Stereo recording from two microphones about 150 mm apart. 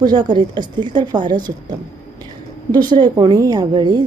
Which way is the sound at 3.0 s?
30° right (ahead or behind).